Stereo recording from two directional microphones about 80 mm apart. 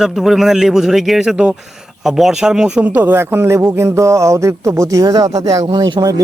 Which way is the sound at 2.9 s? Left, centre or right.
Right.